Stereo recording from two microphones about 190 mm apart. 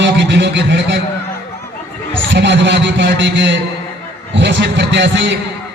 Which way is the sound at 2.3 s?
70° right (ahead or behind).